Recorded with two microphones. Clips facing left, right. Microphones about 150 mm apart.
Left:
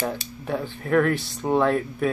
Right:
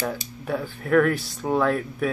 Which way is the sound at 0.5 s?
20° left (ahead or behind).